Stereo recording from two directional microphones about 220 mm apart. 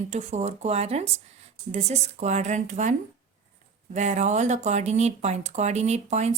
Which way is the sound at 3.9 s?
35° right (ahead or behind).